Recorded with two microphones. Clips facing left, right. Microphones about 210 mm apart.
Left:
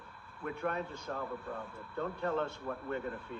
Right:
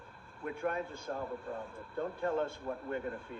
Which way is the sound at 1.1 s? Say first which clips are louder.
Right 2 dB; 25° right (ahead or behind).